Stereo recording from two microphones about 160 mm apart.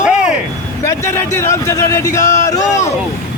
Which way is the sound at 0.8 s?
15° left (ahead or behind).